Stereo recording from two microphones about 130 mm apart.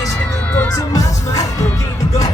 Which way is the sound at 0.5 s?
15° left (ahead or behind).